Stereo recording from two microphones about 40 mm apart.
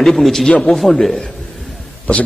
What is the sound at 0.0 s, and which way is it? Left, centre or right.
Speech, centre.